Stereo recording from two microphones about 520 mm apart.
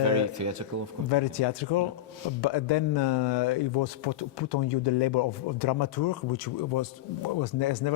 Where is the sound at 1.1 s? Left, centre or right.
Left.